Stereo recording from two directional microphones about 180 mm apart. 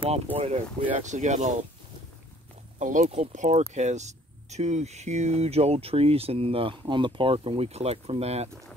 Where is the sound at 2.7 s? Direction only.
45° right (ahead or behind).